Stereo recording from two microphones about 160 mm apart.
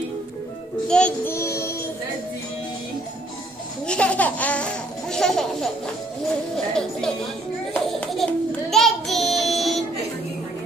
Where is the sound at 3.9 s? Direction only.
5° left (ahead or behind).